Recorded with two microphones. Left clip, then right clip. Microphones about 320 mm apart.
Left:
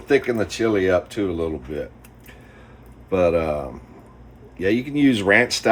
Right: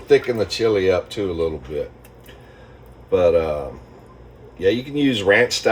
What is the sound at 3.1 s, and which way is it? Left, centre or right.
Speech, left.